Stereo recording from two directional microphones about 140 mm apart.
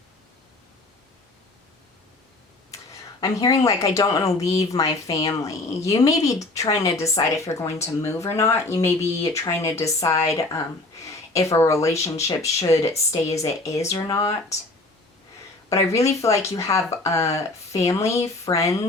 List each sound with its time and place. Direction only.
3.2 s speech: 25° left (ahead or behind)
15.7 s speech: 20° left (ahead or behind)